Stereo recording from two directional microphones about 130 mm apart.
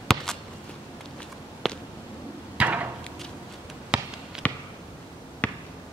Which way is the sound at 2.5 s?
10° right (ahead or behind).